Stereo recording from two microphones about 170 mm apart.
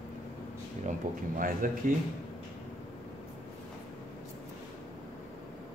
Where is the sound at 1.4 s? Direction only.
55° right (ahead or behind).